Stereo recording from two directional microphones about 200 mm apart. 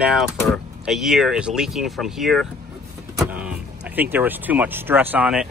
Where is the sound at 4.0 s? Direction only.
10° right (ahead or behind).